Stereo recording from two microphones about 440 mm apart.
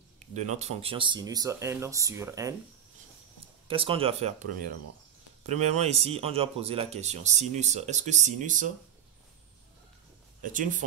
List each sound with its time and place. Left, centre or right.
0.2 s speech: centre
3.6 s speech: centre
5.5 s speech: centre
10.4 s speech: centre